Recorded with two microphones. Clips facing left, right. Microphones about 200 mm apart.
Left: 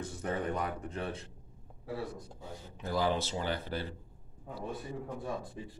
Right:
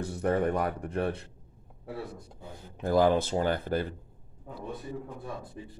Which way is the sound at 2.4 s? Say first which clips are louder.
Right 8 dB; 55° right (ahead or behind).